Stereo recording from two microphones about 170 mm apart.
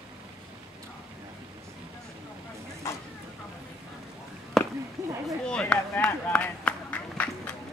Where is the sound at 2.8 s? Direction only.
15° left (ahead or behind).